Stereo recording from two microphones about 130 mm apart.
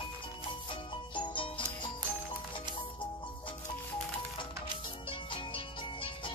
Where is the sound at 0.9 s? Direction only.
40° left (ahead or behind).